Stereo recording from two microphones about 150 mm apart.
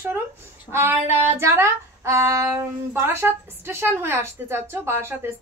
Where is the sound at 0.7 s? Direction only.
15° right (ahead or behind).